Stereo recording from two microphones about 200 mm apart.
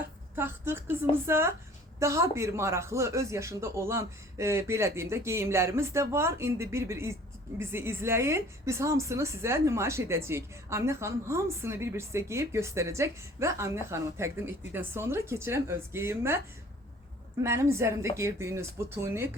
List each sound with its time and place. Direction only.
0.3 s a woman's voice: 10° right (ahead or behind)
17.4 s a woman's voice: 15° right (ahead or behind)